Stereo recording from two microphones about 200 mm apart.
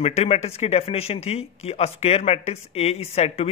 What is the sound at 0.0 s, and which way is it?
Speech, 30° left (ahead or behind).